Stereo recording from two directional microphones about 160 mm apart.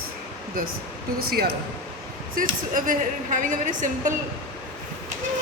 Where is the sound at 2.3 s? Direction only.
60° right (ahead or behind).